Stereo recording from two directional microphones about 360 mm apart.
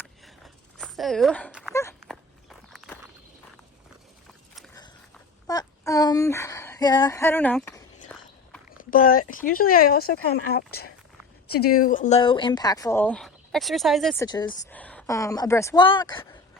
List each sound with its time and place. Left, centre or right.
0.0 s a sound: centre
1.7 s dog: centre
2.0 s walk: centre
4.5 s walk: centre
5.5 s speech: centre
8.8 s speech: left; by 14.3 s centre
14.3 s speech: centre